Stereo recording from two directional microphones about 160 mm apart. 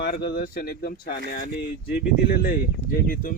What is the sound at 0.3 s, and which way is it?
Speech, 65° left (ahead or behind).